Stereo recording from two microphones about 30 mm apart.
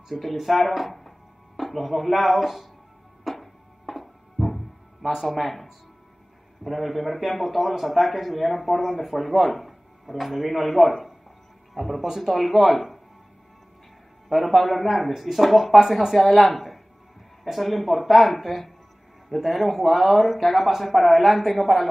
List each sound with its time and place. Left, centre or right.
0.2 s speech: centre
3.3 s music: centre
5.1 s speech: centre
5.4 s speech: centre
14.3 s speech: centre